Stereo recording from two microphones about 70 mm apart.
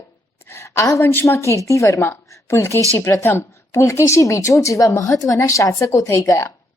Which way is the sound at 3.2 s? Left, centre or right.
Left.